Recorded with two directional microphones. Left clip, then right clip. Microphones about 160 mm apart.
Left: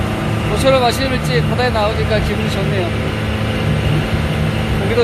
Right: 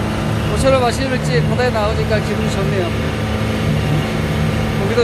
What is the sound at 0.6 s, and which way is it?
Speech, 10° left (ahead or behind).